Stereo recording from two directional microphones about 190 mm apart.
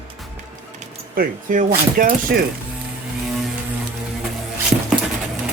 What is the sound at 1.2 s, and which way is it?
Speech, 45° right (ahead or behind).